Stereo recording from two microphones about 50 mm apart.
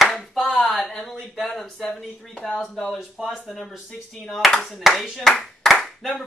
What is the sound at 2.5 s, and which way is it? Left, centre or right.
Speech, centre.